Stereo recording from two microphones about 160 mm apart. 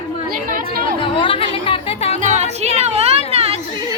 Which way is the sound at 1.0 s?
35° left (ahead or behind).